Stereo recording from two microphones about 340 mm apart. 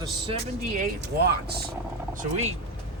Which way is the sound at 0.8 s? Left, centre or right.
Right.